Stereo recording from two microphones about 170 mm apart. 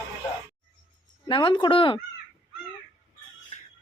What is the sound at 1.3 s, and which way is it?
Speech, 30° left (ahead or behind).